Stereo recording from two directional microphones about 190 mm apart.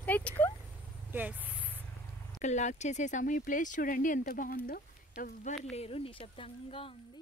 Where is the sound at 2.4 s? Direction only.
40° left (ahead or behind).